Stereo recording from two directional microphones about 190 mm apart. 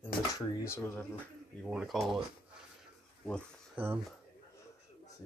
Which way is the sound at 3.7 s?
10° right (ahead or behind).